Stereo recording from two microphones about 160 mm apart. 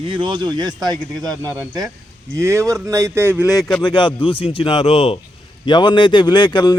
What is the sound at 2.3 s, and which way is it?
Speech, 20° right (ahead or behind).